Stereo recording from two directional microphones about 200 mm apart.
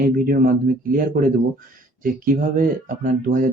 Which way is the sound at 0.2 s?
45° right (ahead or behind).